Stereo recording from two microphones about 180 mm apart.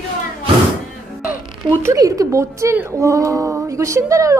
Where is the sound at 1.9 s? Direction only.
20° right (ahead or behind).